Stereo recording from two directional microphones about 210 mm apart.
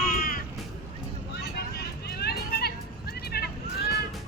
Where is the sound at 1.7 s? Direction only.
50° left (ahead or behind).